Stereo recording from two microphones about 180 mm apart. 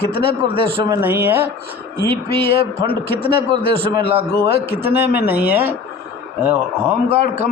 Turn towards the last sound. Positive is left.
turn(degrees=-10)  # may be behind; listen again after turning